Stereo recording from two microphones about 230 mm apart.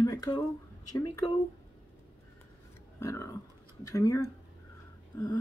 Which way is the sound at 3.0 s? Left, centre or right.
Centre.